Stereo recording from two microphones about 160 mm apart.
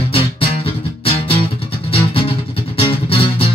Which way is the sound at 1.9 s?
35° left (ahead or behind).